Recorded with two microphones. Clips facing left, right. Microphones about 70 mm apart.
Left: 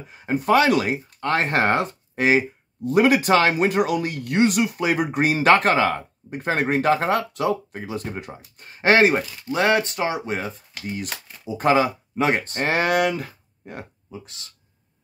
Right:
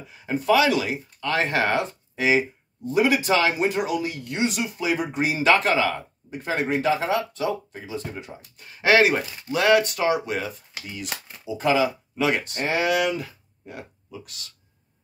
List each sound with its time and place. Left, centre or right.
0.1 s speech: left
8.5 s speech: left
12.6 s speech: left
14.1 s speech: left